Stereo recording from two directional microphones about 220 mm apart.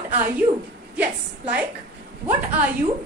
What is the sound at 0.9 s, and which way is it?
A woman's voice, 5° right (ahead or behind).